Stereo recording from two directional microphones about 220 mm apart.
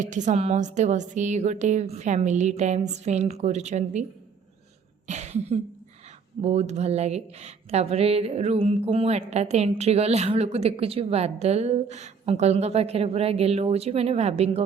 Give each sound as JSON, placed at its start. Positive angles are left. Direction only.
{"t": 0.0, "sound": "a woman's voice", "side_deg": -35}
{"t": 5.0, "sound": "cough", "side_deg": -30}
{"t": 6.4, "sound": "speech", "side_deg": -30}